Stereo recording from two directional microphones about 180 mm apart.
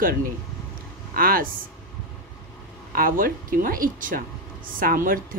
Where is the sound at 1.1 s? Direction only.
55° right (ahead or behind).